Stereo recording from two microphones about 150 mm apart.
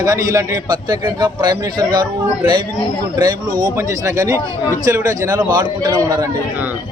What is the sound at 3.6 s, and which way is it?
A man's voice, 20° right (ahead or behind).